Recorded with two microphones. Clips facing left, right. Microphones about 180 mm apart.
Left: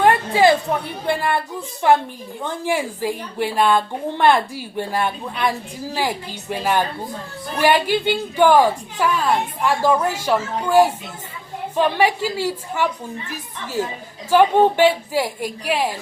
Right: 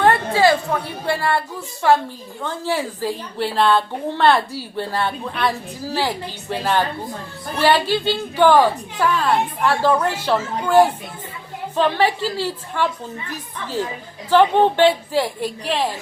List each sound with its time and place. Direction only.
0.0 s a woman's voice: 15° left (ahead or behind)
14.3 s a woman's voice: 10° left (ahead or behind)